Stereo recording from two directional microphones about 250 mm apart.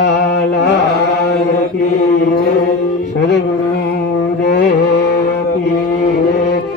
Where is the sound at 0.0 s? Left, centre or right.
Left.